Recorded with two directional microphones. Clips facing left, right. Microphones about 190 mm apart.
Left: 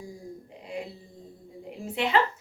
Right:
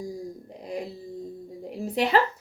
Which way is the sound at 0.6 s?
40° right (ahead or behind).